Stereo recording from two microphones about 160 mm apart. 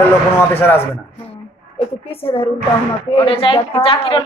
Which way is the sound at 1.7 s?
35° left (ahead or behind).